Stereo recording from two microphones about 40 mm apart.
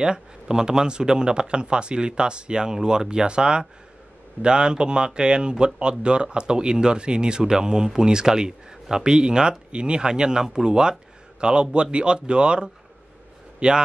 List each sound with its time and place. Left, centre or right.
0.0 s a man's voice: centre